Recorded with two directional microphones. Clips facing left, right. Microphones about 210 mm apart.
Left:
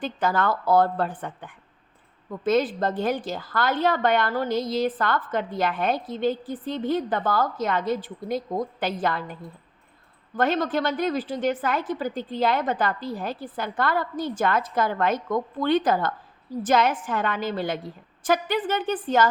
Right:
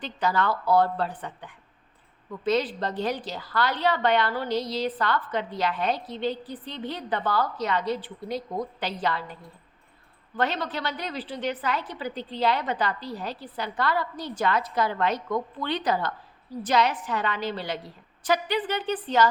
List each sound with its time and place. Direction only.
0.0 s a woman's voice: 50° left (ahead or behind)
10.3 s a woman's voice: 45° left (ahead or behind)